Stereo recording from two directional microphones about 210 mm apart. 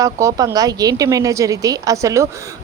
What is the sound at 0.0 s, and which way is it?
Speech, 15° right (ahead or behind).